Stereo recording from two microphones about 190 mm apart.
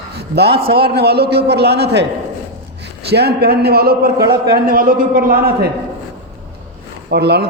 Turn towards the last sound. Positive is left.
turn(degrees=-60)  # may be behind; listen again after turning